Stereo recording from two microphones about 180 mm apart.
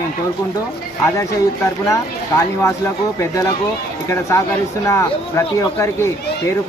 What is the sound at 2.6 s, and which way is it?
Speech, 15° left (ahead or behind).